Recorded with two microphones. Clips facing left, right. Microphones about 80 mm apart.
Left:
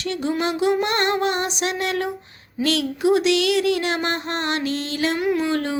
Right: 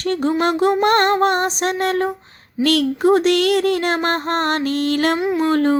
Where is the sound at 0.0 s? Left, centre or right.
Right.